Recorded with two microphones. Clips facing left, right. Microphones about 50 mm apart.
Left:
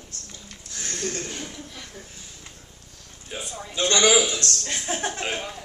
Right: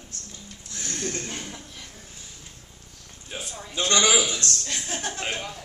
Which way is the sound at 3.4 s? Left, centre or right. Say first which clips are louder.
Left 2 dB; centre.